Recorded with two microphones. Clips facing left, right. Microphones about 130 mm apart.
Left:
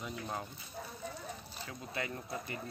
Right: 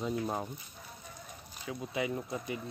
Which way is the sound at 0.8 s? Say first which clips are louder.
Left 6 dB; 90° left.